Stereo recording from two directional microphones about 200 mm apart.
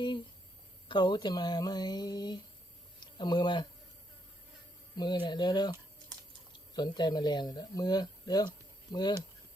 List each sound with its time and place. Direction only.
0.9 s speech: 20° left (ahead or behind)
4.9 s speech: 25° left (ahead or behind)
6.7 s speech: 20° left (ahead or behind)